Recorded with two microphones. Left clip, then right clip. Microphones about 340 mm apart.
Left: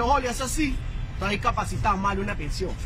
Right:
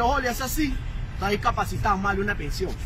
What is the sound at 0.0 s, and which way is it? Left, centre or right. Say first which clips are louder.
A man's voice: even; centre.